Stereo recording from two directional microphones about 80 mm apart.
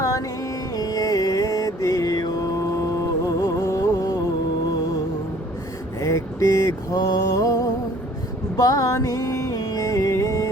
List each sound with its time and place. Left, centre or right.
0.0 s music: left
0.8 s mantra: left
3.2 s music: left
6.0 s mantra: left
8.5 s music: left